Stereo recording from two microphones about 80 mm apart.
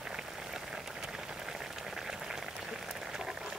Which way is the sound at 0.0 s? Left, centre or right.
Centre.